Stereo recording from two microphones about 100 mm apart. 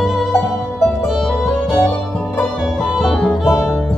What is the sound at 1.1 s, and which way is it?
Music, centre (ahead or behind).